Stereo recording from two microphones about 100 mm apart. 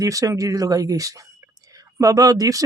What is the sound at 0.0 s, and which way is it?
Speech, 35° right (ahead or behind).